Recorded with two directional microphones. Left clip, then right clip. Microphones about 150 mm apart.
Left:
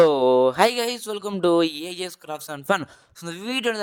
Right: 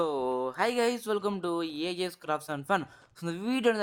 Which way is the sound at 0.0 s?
40° left (ahead or behind).